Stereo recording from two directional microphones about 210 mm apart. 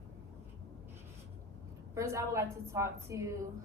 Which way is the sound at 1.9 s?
15° right (ahead or behind).